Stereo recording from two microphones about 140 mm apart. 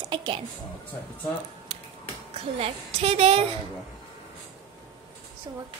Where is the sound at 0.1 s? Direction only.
35° right (ahead or behind).